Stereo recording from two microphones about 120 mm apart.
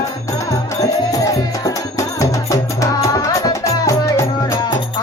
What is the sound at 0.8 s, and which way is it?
Music, 30° left (ahead or behind).